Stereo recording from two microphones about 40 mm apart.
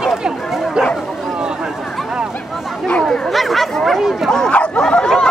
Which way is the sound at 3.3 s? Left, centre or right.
Centre.